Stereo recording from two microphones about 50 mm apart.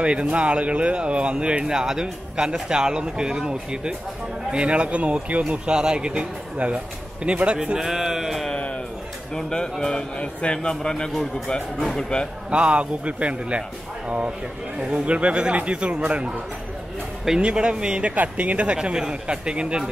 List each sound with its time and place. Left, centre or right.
0.0 s speech: right; by 8.5 s centre
9.3 s speech: centre
12.4 s speech: right
17.4 s speech: right
18.1 s speech: right
18.8 s speech: centre